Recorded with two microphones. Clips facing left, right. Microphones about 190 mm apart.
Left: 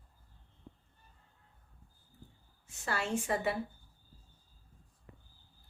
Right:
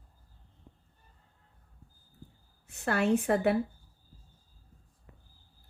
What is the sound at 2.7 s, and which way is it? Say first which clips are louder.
Speech: right 9 dB; 60° right (ahead or behind).